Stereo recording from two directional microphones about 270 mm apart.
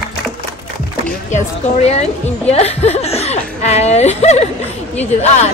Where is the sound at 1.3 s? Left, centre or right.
Left.